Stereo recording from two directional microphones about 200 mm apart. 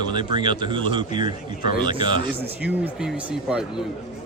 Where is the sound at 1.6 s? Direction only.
45° left (ahead or behind).